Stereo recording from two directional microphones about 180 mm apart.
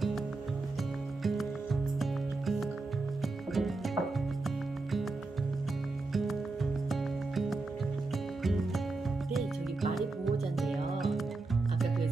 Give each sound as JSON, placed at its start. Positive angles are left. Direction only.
{"t": 1.2, "sound": "music", "side_deg": 0}
{"t": 6.1, "sound": "music", "side_deg": 0}
{"t": 9.3, "sound": "music", "side_deg": 0}